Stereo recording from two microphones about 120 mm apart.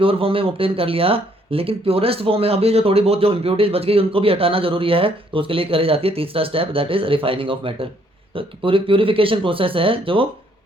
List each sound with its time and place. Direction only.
0.0 s speech: 50° right (ahead or behind)